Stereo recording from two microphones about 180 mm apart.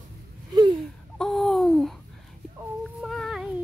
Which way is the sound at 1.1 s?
Centre (ahead or behind).